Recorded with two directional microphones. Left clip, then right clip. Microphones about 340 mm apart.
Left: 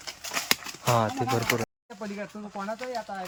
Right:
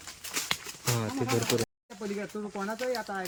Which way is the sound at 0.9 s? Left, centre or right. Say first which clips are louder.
Left 5 dB; centre.